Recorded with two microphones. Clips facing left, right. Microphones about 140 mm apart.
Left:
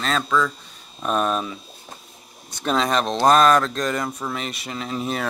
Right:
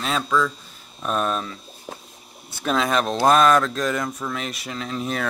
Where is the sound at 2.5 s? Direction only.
Centre (ahead or behind).